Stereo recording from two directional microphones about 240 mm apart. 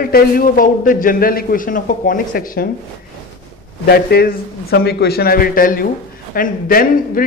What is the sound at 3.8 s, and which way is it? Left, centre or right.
Speech, left.